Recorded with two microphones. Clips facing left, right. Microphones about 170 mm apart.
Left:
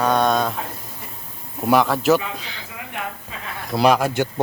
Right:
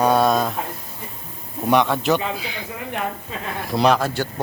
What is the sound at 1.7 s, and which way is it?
Speech, centre (ahead or behind).